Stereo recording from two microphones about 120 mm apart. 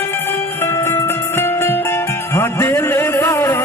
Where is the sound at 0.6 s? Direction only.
20° left (ahead or behind).